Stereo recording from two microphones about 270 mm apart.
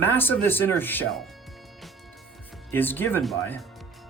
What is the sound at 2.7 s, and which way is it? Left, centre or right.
Speech, centre.